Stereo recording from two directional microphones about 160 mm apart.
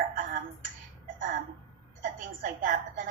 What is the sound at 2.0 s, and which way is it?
Speech, 60° right (ahead or behind).